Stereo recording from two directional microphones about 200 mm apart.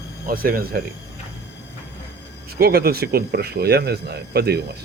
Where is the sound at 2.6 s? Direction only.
50° right (ahead or behind).